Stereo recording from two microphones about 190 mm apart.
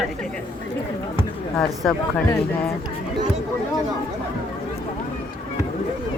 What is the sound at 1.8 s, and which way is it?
Speech, 5° left (ahead or behind).